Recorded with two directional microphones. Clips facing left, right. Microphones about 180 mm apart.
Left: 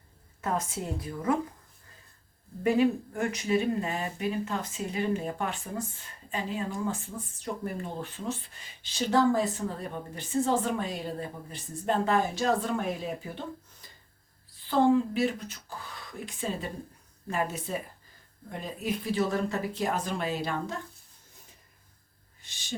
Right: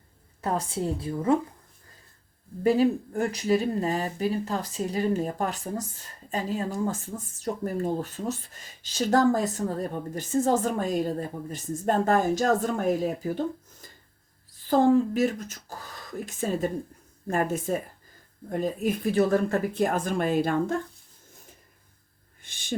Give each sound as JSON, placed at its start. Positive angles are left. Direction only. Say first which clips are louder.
{"t": 0.4, "sound": "a woman's voice", "louder": "right 4 dB", "side_deg": -35}
{"t": 2.6, "sound": "speech", "louder": "right 3 dB", "side_deg": -35}
{"t": 14.7, "sound": "speech", "louder": "right 3 dB", "side_deg": -45}
{"t": 22.4, "sound": "a sound", "louder": "right 2 dB", "side_deg": -55}